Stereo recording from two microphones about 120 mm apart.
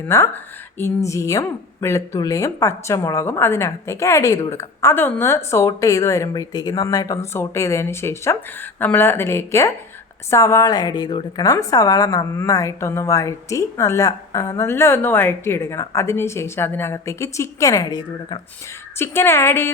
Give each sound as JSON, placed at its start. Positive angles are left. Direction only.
{"t": 0.0, "sound": "speech", "side_deg": 20}
{"t": 18.9, "sound": "speech", "side_deg": 20}